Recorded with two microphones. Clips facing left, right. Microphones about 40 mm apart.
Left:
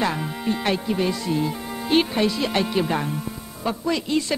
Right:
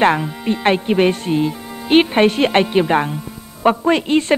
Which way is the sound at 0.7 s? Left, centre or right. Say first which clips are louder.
Right 10 dB; right.